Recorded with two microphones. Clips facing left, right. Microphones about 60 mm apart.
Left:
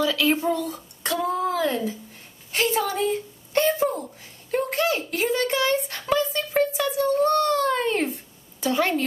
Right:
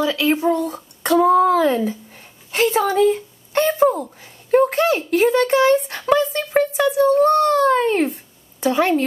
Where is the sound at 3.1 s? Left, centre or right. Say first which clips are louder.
Right 3 dB; right.